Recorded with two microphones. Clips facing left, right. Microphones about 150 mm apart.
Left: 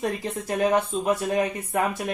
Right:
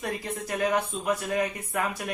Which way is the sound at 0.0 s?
30° left (ahead or behind).